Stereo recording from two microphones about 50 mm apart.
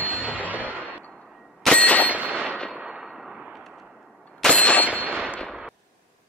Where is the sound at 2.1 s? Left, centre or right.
Right.